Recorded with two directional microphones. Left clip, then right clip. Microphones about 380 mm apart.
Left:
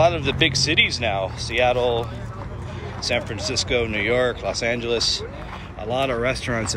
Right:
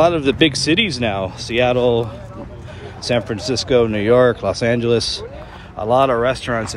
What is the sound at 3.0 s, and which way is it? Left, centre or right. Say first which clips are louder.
Speech: right 4 dB; centre.